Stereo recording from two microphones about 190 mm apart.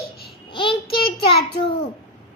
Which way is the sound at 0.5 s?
25° left (ahead or behind).